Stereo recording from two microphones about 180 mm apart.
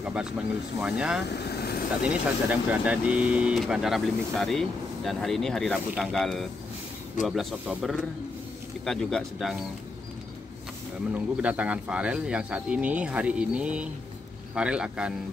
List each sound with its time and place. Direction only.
0.0 s speech: 5° right (ahead or behind)
1.3 s vehicle: 65° left (ahead or behind)
2.0 s speech: 10° right (ahead or behind)
11.1 s speech: 5° right (ahead or behind)